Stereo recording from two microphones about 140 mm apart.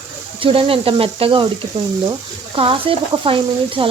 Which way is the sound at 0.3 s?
40° right (ahead or behind).